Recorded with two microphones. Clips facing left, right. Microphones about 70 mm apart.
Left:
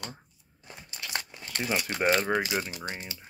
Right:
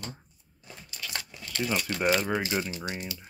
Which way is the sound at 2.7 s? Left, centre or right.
Left.